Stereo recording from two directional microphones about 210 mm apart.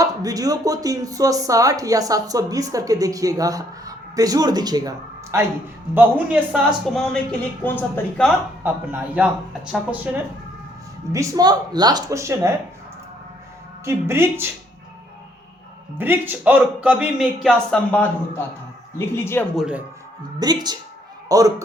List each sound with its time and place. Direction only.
0.0 s speech: 15° right (ahead or behind); by 8.3 s 10° left (ahead or behind)
8.6 s speech: 10° right (ahead or behind)
11.1 s speech: 15° right (ahead or behind)
13.8 s speech: 10° right (ahead or behind)
16.0 s speech: 10° right (ahead or behind); by 19.5 s 10° left (ahead or behind)
19.5 s speech: 5° right (ahead or behind)
20.4 s a woman's voice: 20° right (ahead or behind)